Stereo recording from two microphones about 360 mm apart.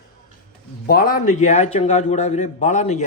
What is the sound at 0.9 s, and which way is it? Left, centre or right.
A man's voice, left.